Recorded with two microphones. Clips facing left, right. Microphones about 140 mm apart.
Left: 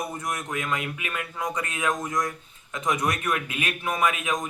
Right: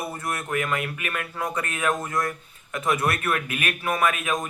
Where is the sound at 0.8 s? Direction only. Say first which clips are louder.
Right 2 dB; 50° right (ahead or behind).